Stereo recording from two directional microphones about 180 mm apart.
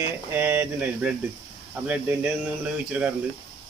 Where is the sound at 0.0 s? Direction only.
10° right (ahead or behind).